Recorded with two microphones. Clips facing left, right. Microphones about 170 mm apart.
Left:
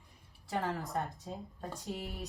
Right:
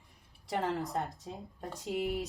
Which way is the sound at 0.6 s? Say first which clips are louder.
Right 3 dB; 20° right (ahead or behind).